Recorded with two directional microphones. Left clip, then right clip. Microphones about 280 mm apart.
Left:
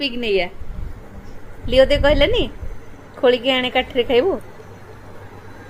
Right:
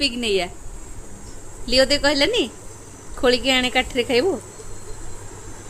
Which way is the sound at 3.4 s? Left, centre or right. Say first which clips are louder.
Left 1 dB; centre.